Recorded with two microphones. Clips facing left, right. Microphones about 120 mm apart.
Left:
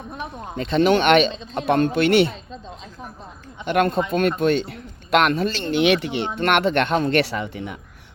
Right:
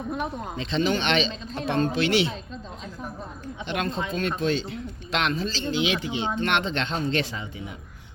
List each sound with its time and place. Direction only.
0.5 s speech: 50° left (ahead or behind)
3.7 s speech: 55° left (ahead or behind)